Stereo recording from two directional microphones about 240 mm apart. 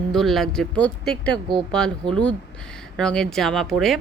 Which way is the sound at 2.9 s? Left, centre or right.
Centre.